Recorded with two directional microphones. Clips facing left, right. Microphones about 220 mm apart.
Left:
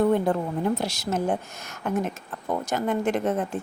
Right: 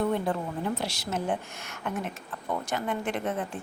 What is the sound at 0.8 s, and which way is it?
A woman's voice, 45° left (ahead or behind).